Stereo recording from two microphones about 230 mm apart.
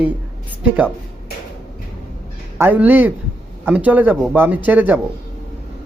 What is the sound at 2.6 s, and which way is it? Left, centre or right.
A man's voice, centre.